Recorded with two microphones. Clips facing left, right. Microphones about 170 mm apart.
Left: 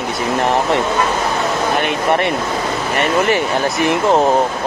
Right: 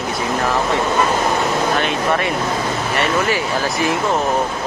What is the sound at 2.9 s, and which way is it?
Speech, 60° left (ahead or behind).